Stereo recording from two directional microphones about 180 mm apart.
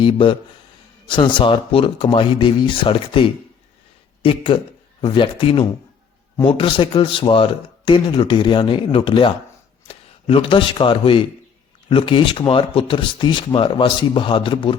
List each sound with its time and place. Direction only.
0.0 s speech: 30° left (ahead or behind)